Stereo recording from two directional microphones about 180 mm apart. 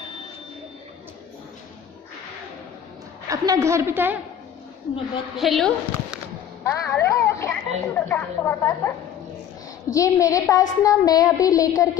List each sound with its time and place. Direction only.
3.3 s a woman's voice: 20° right (ahead or behind)
5.3 s a woman's voice: centre (ahead or behind)
6.6 s speech: 15° left (ahead or behind)
9.9 s a woman's voice: 15° left (ahead or behind)